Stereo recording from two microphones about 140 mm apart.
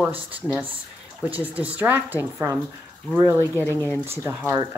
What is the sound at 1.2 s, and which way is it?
Speech, 10° right (ahead or behind).